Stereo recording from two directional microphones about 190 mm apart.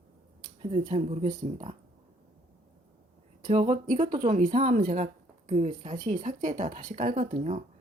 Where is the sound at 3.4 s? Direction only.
35° right (ahead or behind).